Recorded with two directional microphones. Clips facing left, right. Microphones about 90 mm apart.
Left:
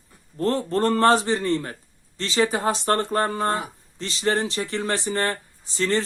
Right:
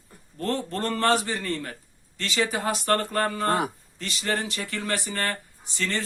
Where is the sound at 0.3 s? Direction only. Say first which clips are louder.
Left 6 dB; 35° left (ahead or behind).